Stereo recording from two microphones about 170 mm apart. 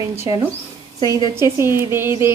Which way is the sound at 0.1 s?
15° right (ahead or behind).